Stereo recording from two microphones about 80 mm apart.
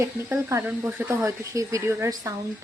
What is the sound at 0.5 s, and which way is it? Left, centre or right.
Speech, right.